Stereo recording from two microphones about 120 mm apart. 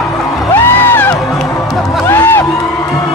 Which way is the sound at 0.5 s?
20° left (ahead or behind).